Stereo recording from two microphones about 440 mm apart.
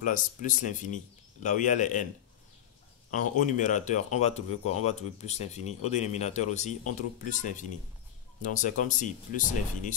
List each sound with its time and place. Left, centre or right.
0.0 s speech: centre
3.3 s speech: centre